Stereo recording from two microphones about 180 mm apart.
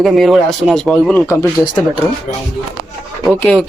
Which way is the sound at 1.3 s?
15° left (ahead or behind).